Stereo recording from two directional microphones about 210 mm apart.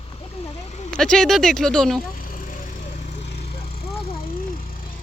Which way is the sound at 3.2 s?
50° left (ahead or behind).